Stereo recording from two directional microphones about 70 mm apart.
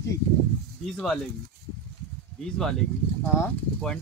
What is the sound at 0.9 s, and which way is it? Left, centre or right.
Speech, centre.